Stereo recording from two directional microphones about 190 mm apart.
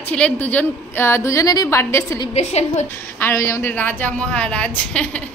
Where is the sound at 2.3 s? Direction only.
35° left (ahead or behind).